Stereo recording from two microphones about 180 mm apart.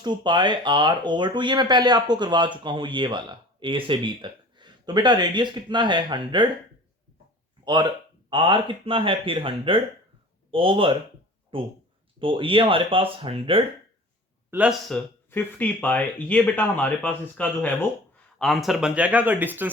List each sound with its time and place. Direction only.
0.0 s speech: 25° right (ahead or behind)
7.6 s speech: 25° right (ahead or behind)
14.5 s speech: 5° right (ahead or behind)
14.8 s speech: 10° left (ahead or behind); by 19.7 s 10° right (ahead or behind)